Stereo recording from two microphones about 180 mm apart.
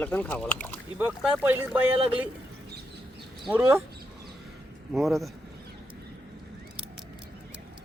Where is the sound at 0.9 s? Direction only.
10° right (ahead or behind).